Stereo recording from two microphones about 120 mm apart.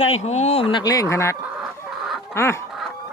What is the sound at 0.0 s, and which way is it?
Speech, 65° left (ahead or behind).